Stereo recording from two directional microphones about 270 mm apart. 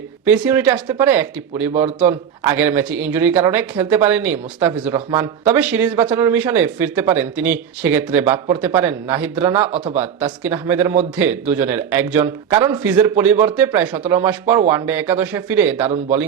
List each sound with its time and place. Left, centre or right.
0.3 s speech: centre
9.7 s speech: right
10.0 s speech: centre